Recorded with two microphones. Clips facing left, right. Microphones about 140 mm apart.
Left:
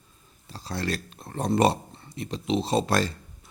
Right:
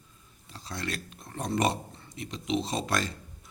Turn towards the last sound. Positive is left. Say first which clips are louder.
# left 6 dB
turn(degrees=35)  # may be behind; listen again after turning